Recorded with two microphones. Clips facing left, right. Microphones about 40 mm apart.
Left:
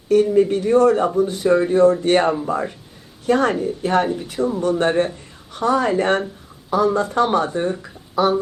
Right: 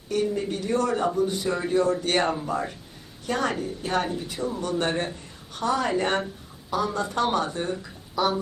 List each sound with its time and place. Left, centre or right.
0.1 s speech: left
2.2 s speech: centre
3.2 s speech: left
6.7 s speech: left